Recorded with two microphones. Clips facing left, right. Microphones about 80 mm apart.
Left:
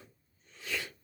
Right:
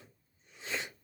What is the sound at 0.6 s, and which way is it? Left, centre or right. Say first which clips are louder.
Sneeze: even; right.